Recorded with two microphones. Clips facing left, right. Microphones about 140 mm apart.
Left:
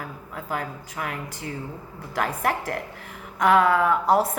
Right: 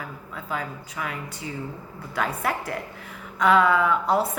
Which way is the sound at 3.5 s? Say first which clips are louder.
Left 1 dB; 45° left (ahead or behind).